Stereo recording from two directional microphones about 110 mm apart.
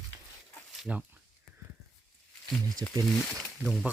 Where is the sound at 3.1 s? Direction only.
Centre (ahead or behind).